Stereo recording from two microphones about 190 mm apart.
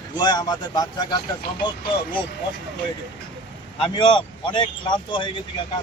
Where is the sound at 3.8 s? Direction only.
25° left (ahead or behind).